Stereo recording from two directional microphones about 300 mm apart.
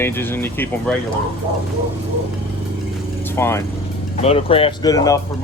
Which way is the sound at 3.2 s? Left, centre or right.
Centre.